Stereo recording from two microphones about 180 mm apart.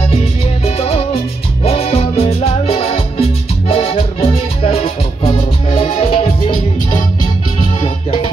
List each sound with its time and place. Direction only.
0.7 s music: 35° left (ahead or behind)